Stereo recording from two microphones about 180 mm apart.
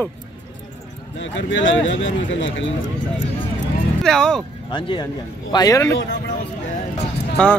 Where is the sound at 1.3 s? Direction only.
90° left.